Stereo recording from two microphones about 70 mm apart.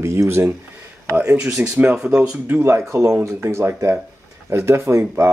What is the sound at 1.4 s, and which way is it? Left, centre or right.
Speech, centre.